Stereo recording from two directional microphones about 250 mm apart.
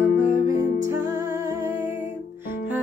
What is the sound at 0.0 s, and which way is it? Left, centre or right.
Music, left.